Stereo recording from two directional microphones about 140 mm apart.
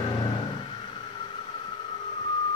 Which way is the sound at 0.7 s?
35° left (ahead or behind).